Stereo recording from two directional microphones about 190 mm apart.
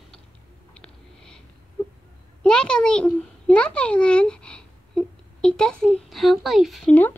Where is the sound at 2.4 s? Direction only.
5° left (ahead or behind).